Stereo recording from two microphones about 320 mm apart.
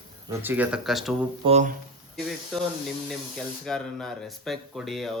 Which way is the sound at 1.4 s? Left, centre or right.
Right.